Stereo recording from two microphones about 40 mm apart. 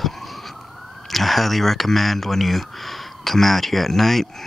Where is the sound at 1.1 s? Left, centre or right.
Centre.